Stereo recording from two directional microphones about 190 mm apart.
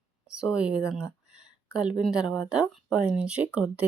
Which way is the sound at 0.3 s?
5° right (ahead or behind).